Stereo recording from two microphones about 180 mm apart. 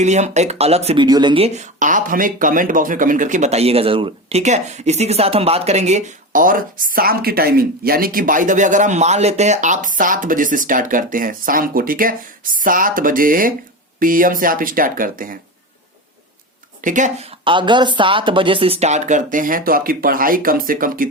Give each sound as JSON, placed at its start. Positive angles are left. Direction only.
{"t": 0.0, "sound": "speech", "side_deg": -40}
{"t": 1.0, "sound": "speech", "side_deg": -25}
{"t": 1.5, "sound": "speech", "side_deg": -45}
{"t": 16.8, "sound": "speech", "side_deg": -45}
{"t": 17.4, "sound": "speech", "side_deg": -25}